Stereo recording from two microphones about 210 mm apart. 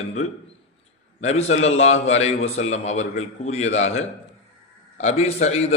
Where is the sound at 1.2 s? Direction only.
30° left (ahead or behind).